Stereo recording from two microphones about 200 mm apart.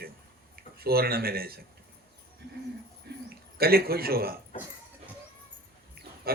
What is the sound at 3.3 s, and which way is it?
Speech, 50° right (ahead or behind).